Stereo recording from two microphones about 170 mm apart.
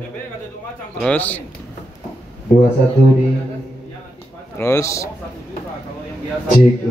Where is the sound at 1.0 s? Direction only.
10° left (ahead or behind).